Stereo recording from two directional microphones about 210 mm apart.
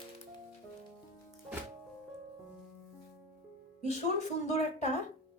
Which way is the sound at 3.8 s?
30° left (ahead or behind).